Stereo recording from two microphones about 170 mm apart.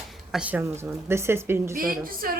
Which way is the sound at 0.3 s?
5° right (ahead or behind).